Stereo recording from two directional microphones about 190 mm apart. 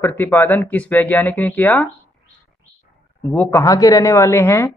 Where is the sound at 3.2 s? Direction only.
10° left (ahead or behind).